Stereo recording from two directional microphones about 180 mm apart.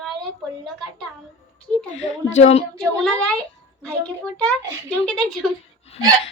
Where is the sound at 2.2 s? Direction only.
40° left (ahead or behind).